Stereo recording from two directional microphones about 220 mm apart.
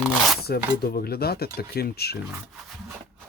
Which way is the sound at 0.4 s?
45° left (ahead or behind).